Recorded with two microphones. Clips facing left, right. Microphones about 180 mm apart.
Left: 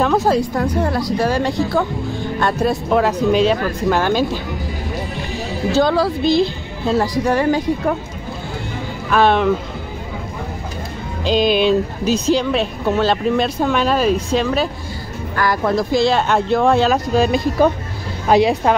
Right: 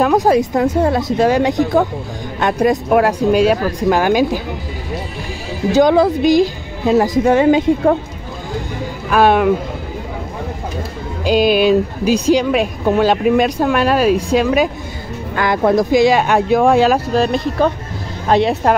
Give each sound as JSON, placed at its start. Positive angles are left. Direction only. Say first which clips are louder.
{"t": 0.0, "sound": "a woman's voice", "louder": "right 3 dB", "side_deg": -15}
{"t": 5.7, "sound": "speech", "louder": "right 5 dB", "side_deg": -15}
{"t": 9.1, "sound": "speech", "louder": "right 2 dB", "side_deg": -10}
{"t": 11.2, "sound": "a woman's voice", "louder": "right 3 dB", "side_deg": -10}